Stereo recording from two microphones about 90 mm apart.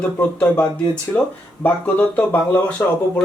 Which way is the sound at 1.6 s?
15° left (ahead or behind).